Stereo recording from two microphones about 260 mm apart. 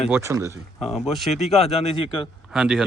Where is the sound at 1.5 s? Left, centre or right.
Left.